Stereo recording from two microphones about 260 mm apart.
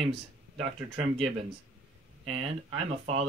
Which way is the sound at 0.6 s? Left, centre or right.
Right.